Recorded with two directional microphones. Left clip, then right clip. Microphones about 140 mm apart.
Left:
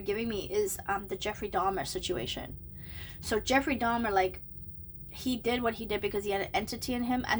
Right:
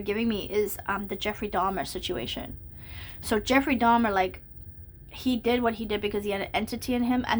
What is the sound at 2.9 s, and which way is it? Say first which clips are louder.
A woman's voice: right 4 dB; 25° right (ahead or behind).